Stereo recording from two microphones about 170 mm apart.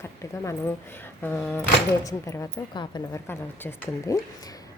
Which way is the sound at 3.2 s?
10° left (ahead or behind).